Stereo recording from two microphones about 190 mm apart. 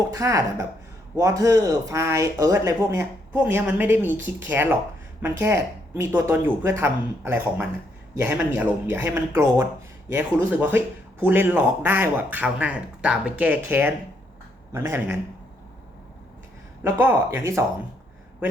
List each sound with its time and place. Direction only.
0.1 s speech: 15° right (ahead or behind)
16.8 s speech: 10° right (ahead or behind)